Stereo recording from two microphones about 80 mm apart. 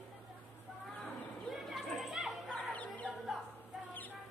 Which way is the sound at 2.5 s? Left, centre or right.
Centre.